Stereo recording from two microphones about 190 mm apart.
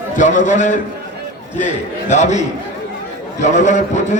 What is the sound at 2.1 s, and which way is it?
A man's voice, 35° left (ahead or behind).